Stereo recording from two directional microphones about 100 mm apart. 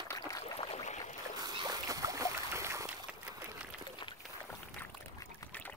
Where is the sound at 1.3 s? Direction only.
40° right (ahead or behind).